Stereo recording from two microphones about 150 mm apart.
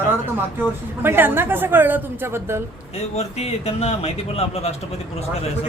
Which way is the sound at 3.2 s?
45° left (ahead or behind).